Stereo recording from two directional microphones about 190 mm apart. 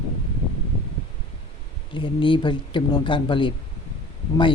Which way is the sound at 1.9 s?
25° left (ahead or behind).